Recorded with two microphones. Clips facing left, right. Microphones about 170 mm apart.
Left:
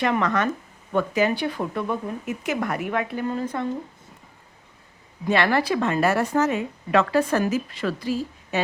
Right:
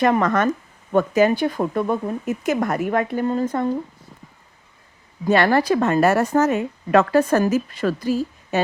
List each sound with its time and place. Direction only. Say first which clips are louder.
0.0 s a woman's voice: right 5 dB; 45° right (ahead or behind)
5.2 s a woman's voice: right 4 dB; 40° right (ahead or behind)